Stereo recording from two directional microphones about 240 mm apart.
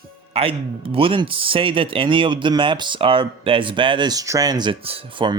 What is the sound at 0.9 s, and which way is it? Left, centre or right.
Speech, right.